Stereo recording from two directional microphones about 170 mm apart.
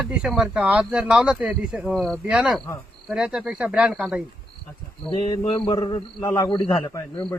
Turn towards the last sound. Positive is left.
turn(degrees=15)  # may be behind; listen again after turning